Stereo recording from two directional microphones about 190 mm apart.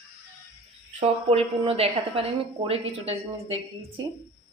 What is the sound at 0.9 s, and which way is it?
A woman's voice, 35° right (ahead or behind).